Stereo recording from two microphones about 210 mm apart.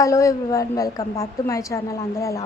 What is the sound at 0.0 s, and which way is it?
A woman's voice, 15° left (ahead or behind).